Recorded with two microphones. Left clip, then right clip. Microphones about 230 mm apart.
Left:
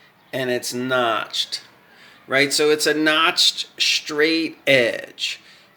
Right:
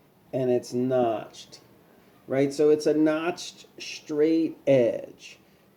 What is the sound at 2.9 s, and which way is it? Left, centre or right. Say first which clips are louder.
Speech: left 7 dB; left.